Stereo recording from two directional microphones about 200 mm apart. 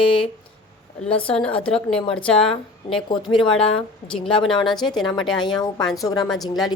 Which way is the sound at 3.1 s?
20° left (ahead or behind).